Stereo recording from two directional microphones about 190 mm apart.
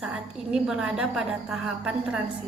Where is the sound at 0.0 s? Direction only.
5° right (ahead or behind).